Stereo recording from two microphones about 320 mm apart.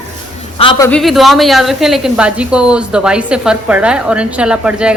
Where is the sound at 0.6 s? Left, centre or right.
Centre.